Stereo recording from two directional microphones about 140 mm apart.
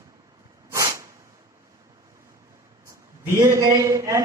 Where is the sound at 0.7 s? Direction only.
20° right (ahead or behind).